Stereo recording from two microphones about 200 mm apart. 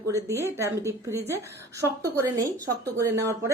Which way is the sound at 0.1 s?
15° right (ahead or behind).